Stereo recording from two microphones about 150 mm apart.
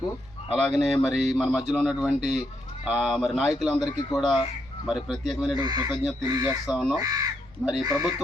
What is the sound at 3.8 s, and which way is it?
Speech, 25° left (ahead or behind).